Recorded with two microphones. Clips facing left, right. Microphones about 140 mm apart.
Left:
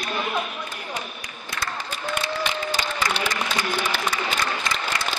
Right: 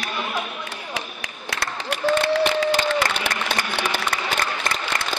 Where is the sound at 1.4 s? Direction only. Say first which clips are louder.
Right 3 dB; 75° right (ahead or behind).